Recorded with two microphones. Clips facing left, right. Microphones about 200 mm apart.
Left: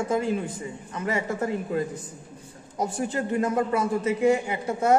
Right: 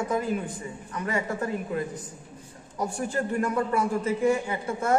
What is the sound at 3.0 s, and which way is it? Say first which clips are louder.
Speech: left 1 dB; 20° left (ahead or behind).